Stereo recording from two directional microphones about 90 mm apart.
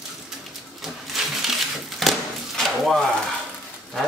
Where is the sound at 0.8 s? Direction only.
5° right (ahead or behind).